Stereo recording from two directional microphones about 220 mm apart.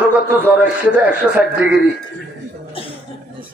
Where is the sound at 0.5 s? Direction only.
5° right (ahead or behind).